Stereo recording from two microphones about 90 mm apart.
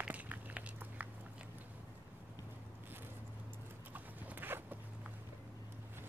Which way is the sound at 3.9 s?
20° right (ahead or behind).